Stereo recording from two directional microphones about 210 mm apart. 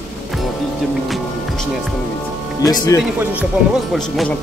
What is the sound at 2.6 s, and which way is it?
Speech, 15° left (ahead or behind).